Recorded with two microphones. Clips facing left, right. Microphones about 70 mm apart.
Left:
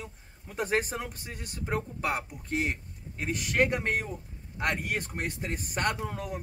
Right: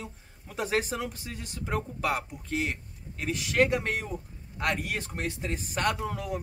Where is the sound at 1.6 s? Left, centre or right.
Centre.